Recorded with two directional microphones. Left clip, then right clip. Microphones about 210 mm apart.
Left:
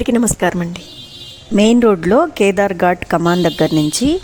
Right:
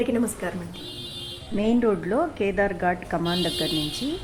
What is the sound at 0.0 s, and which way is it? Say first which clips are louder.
A woman's voice: left 10 dB; 50° left (ahead or behind).